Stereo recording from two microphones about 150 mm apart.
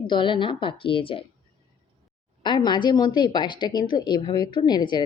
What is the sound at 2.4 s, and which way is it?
A woman's voice, 30° left (ahead or behind).